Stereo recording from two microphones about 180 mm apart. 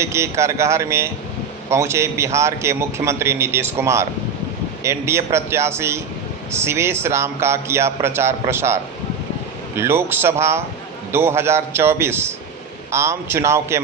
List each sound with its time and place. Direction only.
0.0 s a man's voice: 15° right (ahead or behind)